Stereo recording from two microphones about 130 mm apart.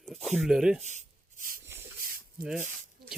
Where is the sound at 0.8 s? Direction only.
65° right (ahead or behind); by 1.6 s 85° right.